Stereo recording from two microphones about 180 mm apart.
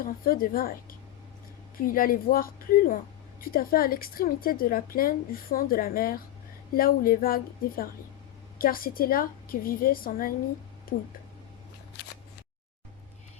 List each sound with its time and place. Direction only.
0.0 s a woman's voice: 55° left (ahead or behind)
11.9 s scissors: 70° left (ahead or behind)